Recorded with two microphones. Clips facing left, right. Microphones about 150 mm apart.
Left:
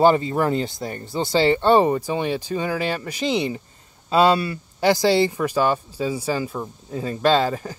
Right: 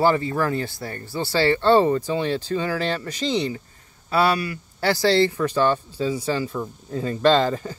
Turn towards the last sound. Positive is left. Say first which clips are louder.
# right 1 dB
turn(degrees=5)  # may be behind; listen again after turning